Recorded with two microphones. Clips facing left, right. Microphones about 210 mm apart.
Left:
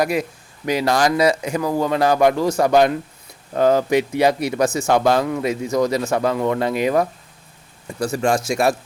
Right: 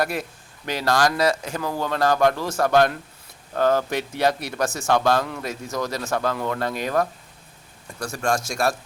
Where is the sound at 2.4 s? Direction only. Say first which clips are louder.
Left 5 dB; centre (ahead or behind).